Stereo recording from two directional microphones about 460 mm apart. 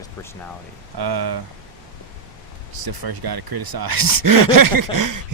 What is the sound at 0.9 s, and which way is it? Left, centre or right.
Speech, right.